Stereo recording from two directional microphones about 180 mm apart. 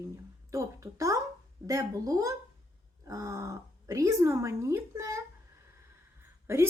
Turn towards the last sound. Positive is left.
turn(degrees=-15)  # may be behind; listen again after turning